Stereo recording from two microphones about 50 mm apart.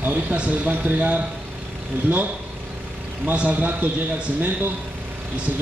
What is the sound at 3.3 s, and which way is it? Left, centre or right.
Speech, right.